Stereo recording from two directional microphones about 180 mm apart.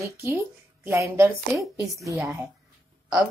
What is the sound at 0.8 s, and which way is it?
A woman's voice, 15° right (ahead or behind).